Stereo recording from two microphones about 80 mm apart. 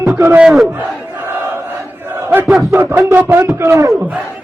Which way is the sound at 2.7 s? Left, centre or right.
Right.